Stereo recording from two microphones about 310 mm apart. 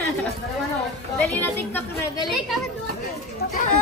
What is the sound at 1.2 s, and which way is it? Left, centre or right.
A woman's voice, centre.